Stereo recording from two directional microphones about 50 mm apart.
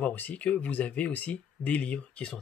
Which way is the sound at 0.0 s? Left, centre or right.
Left.